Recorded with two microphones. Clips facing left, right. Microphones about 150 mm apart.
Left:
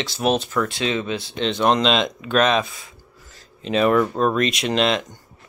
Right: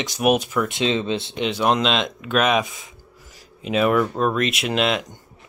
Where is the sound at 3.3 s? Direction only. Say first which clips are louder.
Left 1 dB; 5° right (ahead or behind).